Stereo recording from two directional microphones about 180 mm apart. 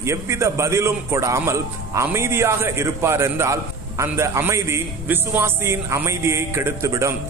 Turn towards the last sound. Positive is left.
turn(degrees=-15)  # may be behind; listen again after turning